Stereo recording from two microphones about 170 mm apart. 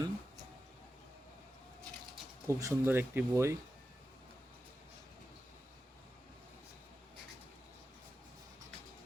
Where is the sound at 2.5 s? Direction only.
15° right (ahead or behind).